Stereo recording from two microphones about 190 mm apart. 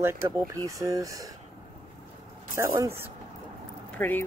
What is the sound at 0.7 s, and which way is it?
Speech, 15° right (ahead or behind).